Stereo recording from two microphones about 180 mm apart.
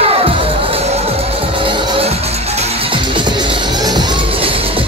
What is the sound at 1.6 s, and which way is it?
Music, 30° right (ahead or behind).